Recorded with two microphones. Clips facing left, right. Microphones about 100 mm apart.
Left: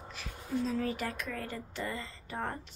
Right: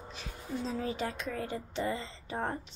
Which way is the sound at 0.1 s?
20° right (ahead or behind).